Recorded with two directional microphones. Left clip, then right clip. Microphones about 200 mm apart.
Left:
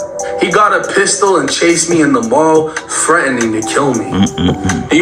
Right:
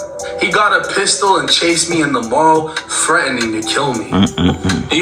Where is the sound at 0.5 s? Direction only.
30° left (ahead or behind).